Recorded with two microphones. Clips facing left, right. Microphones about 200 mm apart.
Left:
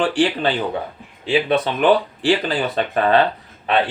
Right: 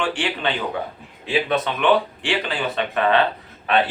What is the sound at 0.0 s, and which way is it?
Speech, 35° left (ahead or behind).